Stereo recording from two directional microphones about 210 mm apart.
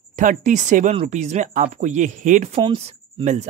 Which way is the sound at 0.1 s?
35° right (ahead or behind).